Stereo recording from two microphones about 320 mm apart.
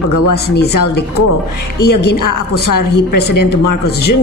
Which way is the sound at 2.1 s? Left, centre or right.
Left.